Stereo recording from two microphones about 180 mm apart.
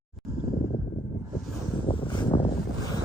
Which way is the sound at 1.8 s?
25° left (ahead or behind).